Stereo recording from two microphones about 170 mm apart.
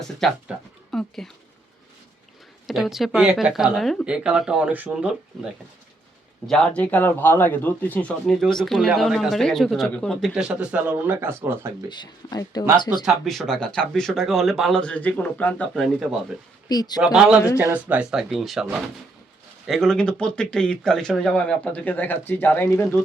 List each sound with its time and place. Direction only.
0.0 s speech: centre (ahead or behind)
2.6 s a man's voice: centre (ahead or behind)
6.5 s a man's voice: 5° left (ahead or behind); by 11.9 s 15° right (ahead or behind)
11.9 s speech: 25° left (ahead or behind)
13.1 s a man's voice: centre (ahead or behind)
16.6 s speech: 25° left (ahead or behind)
17.0 s a man's voice: 5° right (ahead or behind)
19.6 s a man's voice: centre (ahead or behind)